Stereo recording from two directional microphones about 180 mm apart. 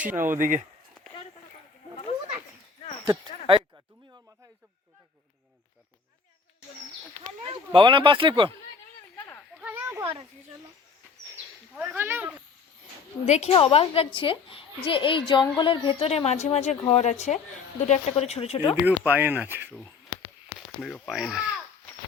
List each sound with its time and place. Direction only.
0.0 s speech: 10° right (ahead or behind)
0.3 s speech: 45° right (ahead or behind)
3.0 s speech: 25° right (ahead or behind)
7.7 s speech: 25° right (ahead or behind)
9.6 s a sound: 10° right (ahead or behind)
11.7 s speech: 5° right (ahead or behind)
13.2 s a woman's voice: 40° left (ahead or behind)
18.9 s speech: 10° right (ahead or behind)
20.8 s speech: 5° left (ahead or behind)